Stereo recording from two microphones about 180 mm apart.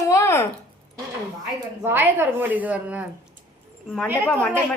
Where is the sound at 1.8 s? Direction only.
10° right (ahead or behind).